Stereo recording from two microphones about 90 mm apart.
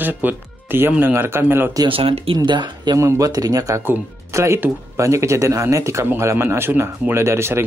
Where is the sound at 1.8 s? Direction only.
90° right; by 3.0 s 60° right (ahead or behind).